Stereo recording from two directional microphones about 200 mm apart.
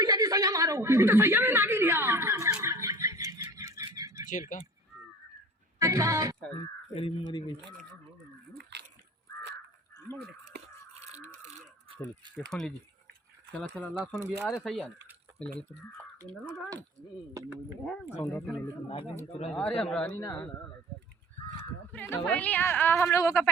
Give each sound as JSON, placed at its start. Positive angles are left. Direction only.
{"t": 0.0, "sound": "a sound", "side_deg": -20}
{"t": 4.3, "sound": "speech", "side_deg": 40}
{"t": 5.8, "sound": "speech", "side_deg": -15}
{"t": 6.9, "sound": "speech", "side_deg": 30}
{"t": 8.7, "sound": "splash", "side_deg": -60}
{"t": 10.2, "sound": "crow", "side_deg": -55}
{"t": 12.5, "sound": "a woman's voice", "side_deg": 0}
{"t": 18.3, "sound": "a woman's voice", "side_deg": 5}
{"t": 21.9, "sound": "a woman's voice", "side_deg": 10}